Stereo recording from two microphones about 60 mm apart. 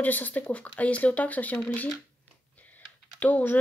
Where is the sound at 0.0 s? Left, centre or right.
Left.